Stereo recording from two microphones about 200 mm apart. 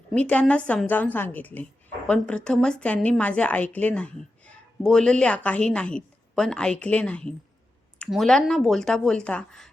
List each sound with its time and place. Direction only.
0.1 s a woman's voice: 5° left (ahead or behind)